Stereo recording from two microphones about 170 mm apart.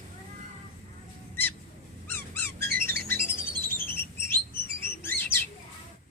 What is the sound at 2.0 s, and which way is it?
Squeak, 10° left (ahead or behind).